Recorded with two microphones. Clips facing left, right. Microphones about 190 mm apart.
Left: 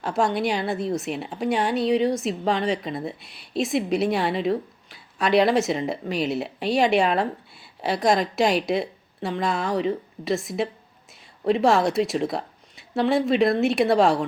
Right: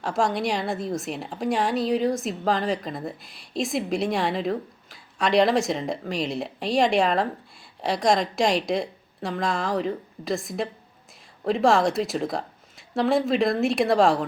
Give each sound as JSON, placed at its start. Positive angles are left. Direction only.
{"t": 0.0, "sound": "a woman's voice", "side_deg": 0}